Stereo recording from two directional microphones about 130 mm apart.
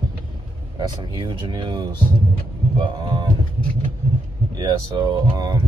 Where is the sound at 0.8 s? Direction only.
35° right (ahead or behind).